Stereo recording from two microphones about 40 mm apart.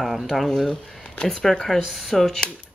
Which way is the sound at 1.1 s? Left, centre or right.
Left.